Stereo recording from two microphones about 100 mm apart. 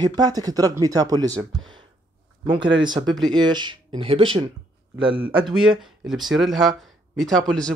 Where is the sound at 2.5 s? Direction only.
50° right (ahead or behind).